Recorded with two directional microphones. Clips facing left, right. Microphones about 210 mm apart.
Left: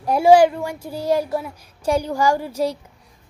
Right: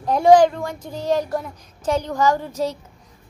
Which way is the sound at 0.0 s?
10° left (ahead or behind).